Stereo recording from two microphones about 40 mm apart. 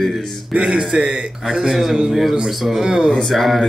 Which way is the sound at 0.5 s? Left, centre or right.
Centre.